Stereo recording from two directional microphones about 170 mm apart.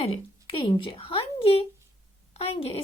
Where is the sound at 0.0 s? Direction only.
35° left (ahead or behind).